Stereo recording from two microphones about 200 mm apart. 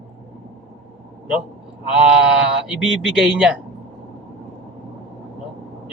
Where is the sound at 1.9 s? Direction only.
5° right (ahead or behind).